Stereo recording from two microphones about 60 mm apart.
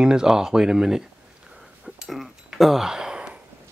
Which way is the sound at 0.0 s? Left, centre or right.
Centre.